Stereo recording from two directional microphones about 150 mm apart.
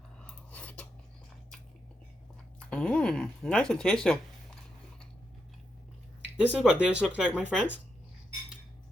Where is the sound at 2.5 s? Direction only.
10° left (ahead or behind).